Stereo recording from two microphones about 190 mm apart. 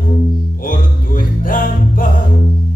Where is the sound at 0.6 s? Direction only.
45° left (ahead or behind).